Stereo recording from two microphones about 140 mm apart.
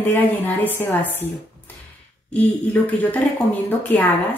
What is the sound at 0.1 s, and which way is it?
A woman's voice, 15° left (ahead or behind).